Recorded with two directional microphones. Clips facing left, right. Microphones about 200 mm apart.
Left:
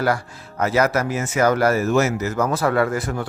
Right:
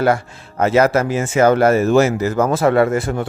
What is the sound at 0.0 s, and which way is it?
Speech, 25° right (ahead or behind).